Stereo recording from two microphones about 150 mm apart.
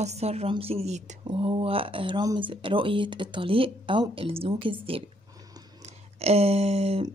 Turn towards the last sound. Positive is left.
turn(degrees=-45)  # may be behind; listen again after turning